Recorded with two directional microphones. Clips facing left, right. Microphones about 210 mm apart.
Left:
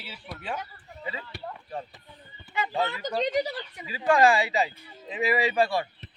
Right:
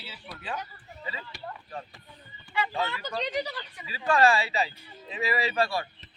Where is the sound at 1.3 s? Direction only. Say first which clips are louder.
Left 3 dB; 60° left (ahead or behind).